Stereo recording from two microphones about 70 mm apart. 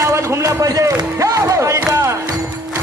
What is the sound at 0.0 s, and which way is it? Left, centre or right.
Music, right.